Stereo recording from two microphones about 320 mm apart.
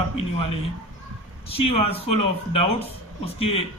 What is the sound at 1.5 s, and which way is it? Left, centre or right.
Speech, centre.